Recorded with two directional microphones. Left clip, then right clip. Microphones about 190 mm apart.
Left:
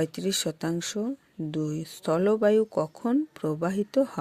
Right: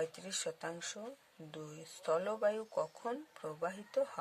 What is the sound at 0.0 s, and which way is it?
Speech, 40° left (ahead or behind).